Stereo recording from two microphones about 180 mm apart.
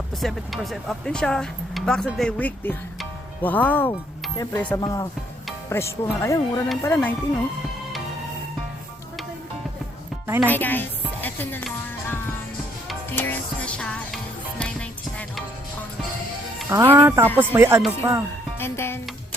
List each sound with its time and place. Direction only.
0.2 s speech: centre (ahead or behind)
4.8 s speech: 20° left (ahead or behind)
10.2 s speech: 15° right (ahead or behind)
10.5 s music: 10° left (ahead or behind)
16.6 s speech: 15° right (ahead or behind)
18.6 s speech: 15° left (ahead or behind)